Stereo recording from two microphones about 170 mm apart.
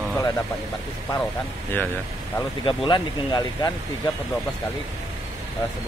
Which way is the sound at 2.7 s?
30° left (ahead or behind).